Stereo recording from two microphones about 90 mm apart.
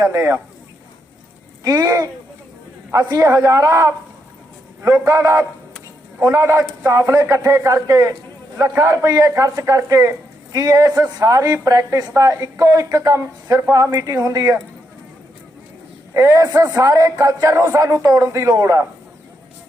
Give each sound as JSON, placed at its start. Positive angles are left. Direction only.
{"t": 0.0, "sound": "a woman's voice", "side_deg": -35}
{"t": 1.6, "sound": "a woman's voice", "side_deg": -40}
{"t": 13.9, "sound": "a woman's voice", "side_deg": -40}
{"t": 16.1, "sound": "a woman's voice", "side_deg": -35}